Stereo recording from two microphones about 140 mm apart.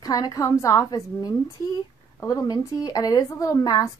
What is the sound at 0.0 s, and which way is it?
Speech, 25° left (ahead or behind).